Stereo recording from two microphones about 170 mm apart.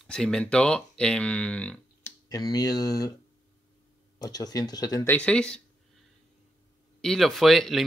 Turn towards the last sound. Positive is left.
turn(degrees=0)  # may be behind; listen again after turning